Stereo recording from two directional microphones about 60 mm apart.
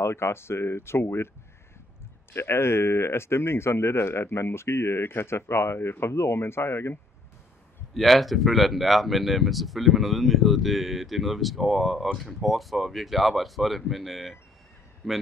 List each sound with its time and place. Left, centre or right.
0.0 s speech: left
2.3 s speech: left
7.9 s speech: centre